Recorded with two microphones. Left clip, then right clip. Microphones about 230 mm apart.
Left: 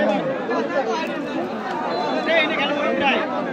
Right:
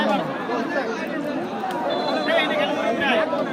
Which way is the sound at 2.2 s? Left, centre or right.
Left.